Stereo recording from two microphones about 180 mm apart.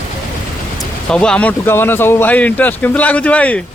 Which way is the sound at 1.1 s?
5° left (ahead or behind).